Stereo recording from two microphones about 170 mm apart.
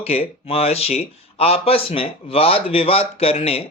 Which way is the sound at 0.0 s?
35° left (ahead or behind).